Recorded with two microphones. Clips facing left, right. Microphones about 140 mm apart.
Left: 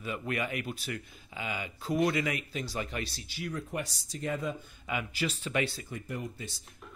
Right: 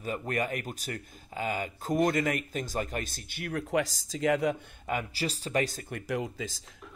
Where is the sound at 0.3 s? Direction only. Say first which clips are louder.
Right 1 dB; 45° right (ahead or behind); by 4.6 s 70° right (ahead or behind).